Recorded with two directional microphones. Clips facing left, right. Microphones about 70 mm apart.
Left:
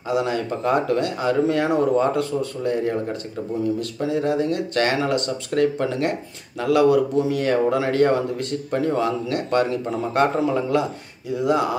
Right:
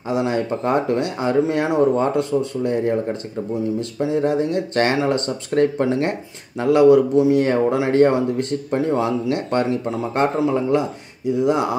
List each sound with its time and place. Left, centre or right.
0.1 s speech: right